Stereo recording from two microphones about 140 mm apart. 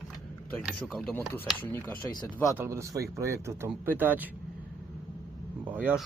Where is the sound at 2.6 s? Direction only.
20° right (ahead or behind).